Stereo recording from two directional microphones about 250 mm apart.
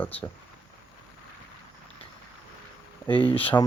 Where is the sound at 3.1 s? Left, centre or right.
Left.